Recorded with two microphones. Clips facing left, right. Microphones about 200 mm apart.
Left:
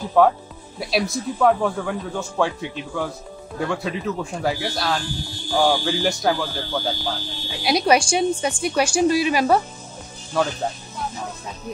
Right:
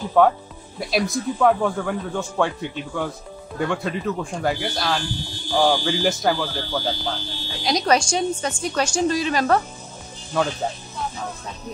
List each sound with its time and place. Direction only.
0.2 s speech: centre (ahead or behind)
7.1 s a woman's voice: 10° left (ahead or behind)